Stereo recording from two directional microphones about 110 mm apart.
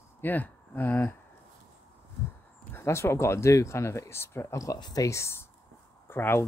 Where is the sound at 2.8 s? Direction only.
25° left (ahead or behind).